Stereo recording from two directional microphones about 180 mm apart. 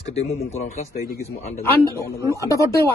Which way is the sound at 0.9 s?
55° left (ahead or behind).